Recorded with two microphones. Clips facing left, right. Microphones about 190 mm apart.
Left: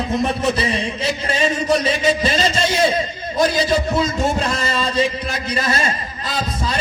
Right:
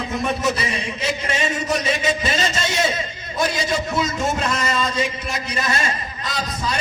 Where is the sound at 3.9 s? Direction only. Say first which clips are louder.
Left 3 dB; 35° left (ahead or behind).